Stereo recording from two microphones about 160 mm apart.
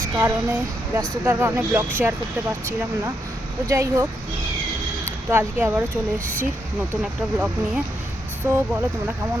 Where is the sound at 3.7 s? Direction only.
20° right (ahead or behind).